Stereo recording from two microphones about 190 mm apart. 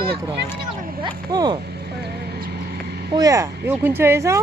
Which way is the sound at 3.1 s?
20° right (ahead or behind).